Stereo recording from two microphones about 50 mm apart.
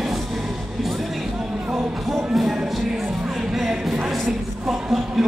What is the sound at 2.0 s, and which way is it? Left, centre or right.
Music, centre.